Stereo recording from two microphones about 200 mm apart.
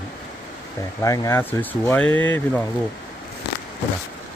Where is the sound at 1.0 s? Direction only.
15° left (ahead or behind).